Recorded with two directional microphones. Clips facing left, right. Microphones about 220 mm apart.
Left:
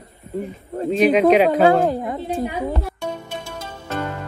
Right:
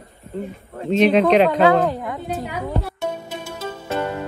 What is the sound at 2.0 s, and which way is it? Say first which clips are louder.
Speech: left 3 dB; 30° left (ahead or behind).